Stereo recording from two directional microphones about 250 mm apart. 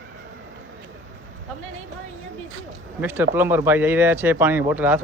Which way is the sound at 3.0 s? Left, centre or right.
Centre.